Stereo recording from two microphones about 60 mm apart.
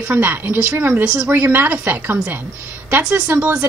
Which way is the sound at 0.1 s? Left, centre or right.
Right.